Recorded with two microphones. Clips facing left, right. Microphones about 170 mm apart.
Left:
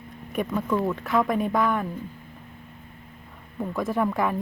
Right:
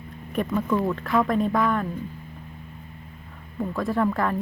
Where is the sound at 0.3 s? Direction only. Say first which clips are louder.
Right 1 dB; 5° left (ahead or behind).